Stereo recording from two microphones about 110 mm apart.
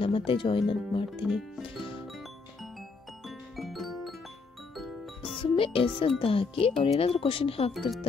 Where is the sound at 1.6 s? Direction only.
50° left (ahead or behind).